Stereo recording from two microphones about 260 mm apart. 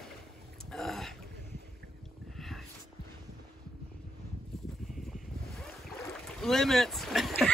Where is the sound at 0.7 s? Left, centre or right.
Centre.